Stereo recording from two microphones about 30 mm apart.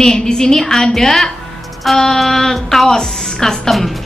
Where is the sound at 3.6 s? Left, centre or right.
Centre.